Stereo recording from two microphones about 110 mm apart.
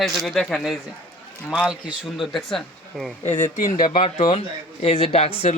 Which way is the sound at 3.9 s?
55° left (ahead or behind).